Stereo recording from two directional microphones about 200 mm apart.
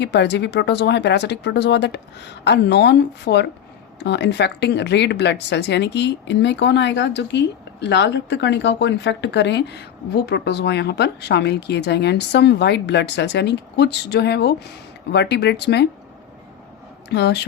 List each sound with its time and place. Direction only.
0.0 s speech: 60° left (ahead or behind)
17.1 s speech: 60° left (ahead or behind)